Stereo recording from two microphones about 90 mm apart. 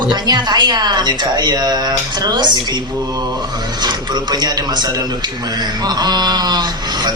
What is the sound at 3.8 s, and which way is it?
A man's voice, 50° right (ahead or behind).